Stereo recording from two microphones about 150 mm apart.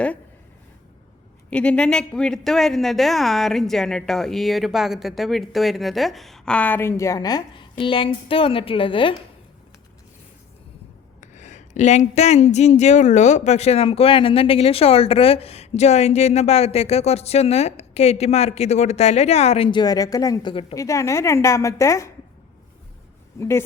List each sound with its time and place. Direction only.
1.5 s a woman's voice: 5° left (ahead or behind); by 9.1 s 35° left (ahead or behind)
11.2 s speech: 55° left (ahead or behind); by 20.7 s 35° left (ahead or behind)
20.7 s a woman's voice: 20° left (ahead or behind)
23.4 s a woman's voice: 20° left (ahead or behind)